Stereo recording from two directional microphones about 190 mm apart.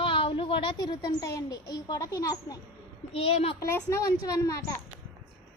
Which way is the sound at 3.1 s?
30° left (ahead or behind).